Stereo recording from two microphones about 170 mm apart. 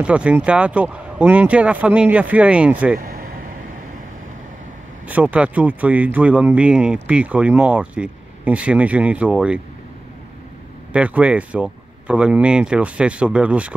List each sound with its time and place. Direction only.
0.0 s speech: 5° right (ahead or behind)
3.0 s vehicle: 60° right (ahead or behind)
5.0 s speech: 10° right (ahead or behind)
10.9 s speech: 5° right (ahead or behind)